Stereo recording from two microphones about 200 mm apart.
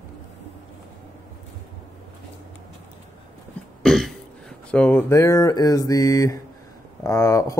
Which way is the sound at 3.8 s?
Centre (ahead or behind).